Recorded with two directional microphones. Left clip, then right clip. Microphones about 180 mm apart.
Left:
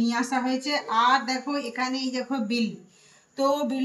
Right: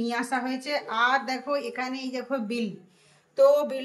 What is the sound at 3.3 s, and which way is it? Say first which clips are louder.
Speech: right 5 dB; 60° right (ahead or behind).